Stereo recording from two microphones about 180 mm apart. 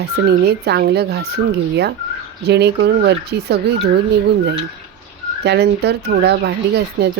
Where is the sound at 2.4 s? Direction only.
65° right (ahead or behind).